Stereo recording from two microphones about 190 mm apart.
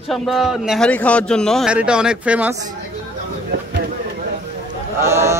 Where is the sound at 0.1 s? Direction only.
Centre (ahead or behind).